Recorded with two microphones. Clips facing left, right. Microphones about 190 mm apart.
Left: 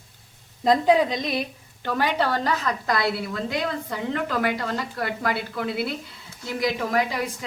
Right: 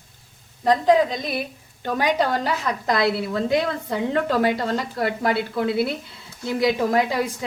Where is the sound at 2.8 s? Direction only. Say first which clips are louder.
Right 4 dB; 25° right (ahead or behind).